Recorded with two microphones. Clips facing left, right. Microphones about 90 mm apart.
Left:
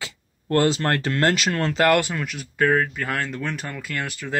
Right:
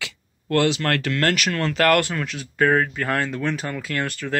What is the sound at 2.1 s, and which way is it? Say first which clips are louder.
A man's voice: right 1 dB; 5° left (ahead or behind).